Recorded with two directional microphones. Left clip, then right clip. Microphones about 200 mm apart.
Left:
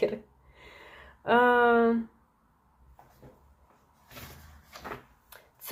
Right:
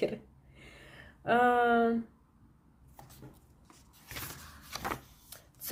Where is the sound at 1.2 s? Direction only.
15° right (ahead or behind).